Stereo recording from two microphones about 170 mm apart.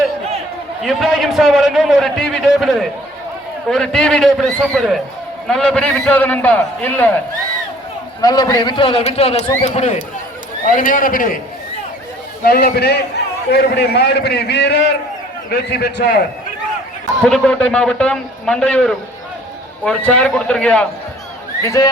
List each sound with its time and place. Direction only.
0.8 s a man's voice: centre (ahead or behind)
8.2 s a man's voice: 20° left (ahead or behind); by 11.3 s 55° left (ahead or behind)
12.5 s a man's voice: 70° left (ahead or behind)
17.2 s a man's voice: 5° left (ahead or behind)
21.6 s speech: 20° left (ahead or behind)